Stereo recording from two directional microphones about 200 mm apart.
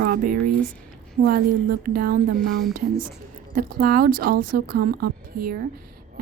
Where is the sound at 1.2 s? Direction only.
50° right (ahead or behind).